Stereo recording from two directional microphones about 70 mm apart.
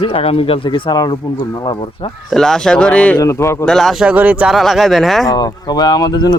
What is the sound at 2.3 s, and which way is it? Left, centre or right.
Speech, centre.